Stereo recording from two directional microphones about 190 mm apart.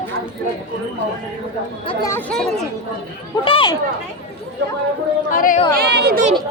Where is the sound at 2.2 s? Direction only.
5° left (ahead or behind).